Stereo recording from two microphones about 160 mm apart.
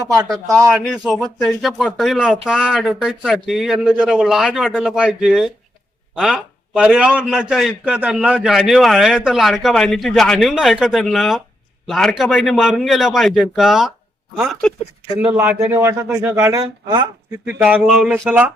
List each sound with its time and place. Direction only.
0.7 s a man's voice: 5° right (ahead or behind)
15.4 s speech: 15° right (ahead or behind)
17.6 s speech: 5° right (ahead or behind)